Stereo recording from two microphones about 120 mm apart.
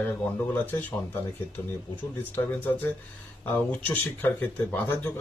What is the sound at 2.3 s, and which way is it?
Speech, 15° left (ahead or behind).